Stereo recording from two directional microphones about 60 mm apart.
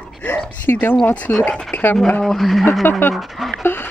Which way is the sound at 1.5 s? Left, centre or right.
Centre.